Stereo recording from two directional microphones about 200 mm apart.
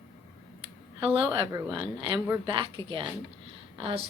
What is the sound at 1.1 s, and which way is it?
A woman's voice, 25° right (ahead or behind).